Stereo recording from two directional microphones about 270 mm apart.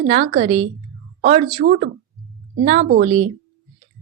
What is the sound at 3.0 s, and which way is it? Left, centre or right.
Speech, right.